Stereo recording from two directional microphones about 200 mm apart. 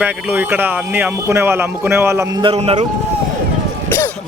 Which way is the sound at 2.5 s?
30° right (ahead or behind).